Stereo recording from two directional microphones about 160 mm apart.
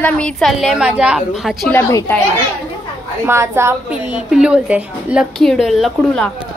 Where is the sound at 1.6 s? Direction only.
10° left (ahead or behind).